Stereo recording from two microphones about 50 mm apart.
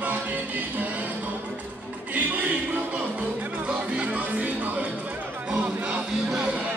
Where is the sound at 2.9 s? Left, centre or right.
Right.